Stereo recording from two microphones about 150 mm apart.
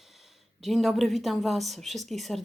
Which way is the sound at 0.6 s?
Centre (ahead or behind).